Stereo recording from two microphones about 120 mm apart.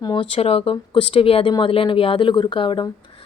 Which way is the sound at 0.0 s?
40° left (ahead or behind).